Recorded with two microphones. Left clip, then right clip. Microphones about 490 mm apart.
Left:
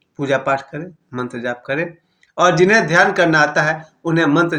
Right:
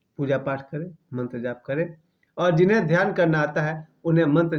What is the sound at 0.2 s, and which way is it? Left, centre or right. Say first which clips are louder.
Speech: left 8 dB; right.